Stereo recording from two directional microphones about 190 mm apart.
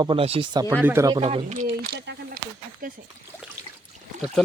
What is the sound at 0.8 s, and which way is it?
Speech, 15° right (ahead or behind).